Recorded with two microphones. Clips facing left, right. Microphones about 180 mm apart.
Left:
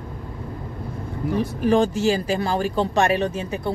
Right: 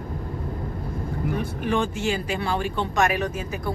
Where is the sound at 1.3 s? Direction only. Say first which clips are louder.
Left 7 dB; 40° left (ahead or behind).